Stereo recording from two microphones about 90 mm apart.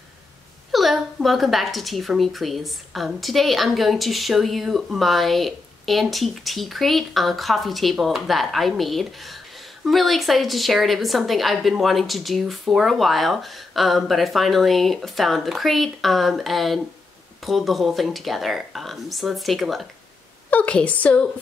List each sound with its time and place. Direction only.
0.7 s a woman's voice: centre (ahead or behind)
20.4 s a woman's voice: 15° left (ahead or behind)